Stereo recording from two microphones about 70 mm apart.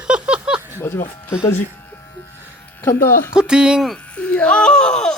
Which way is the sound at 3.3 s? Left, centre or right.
Centre.